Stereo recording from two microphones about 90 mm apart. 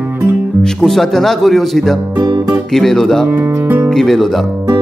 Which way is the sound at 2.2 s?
50° right (ahead or behind).